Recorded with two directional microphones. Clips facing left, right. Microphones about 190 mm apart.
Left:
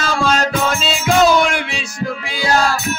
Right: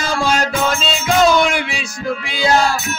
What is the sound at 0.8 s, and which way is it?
Music, 5° left (ahead or behind).